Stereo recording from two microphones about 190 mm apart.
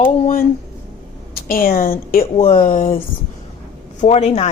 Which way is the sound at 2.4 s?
30° left (ahead or behind).